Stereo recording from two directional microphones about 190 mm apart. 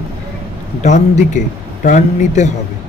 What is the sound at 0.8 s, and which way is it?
Speech, 35° left (ahead or behind).